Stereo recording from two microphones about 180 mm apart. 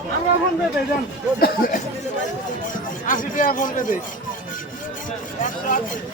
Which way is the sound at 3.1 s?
50° left (ahead or behind).